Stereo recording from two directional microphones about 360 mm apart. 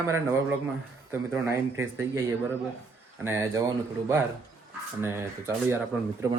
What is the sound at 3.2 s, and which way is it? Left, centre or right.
A man's voice, centre.